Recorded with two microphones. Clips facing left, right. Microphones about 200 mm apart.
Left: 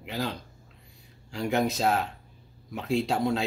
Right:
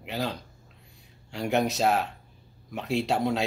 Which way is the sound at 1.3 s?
Centre (ahead or behind).